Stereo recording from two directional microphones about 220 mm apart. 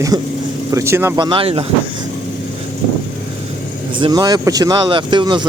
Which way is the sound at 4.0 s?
20° right (ahead or behind).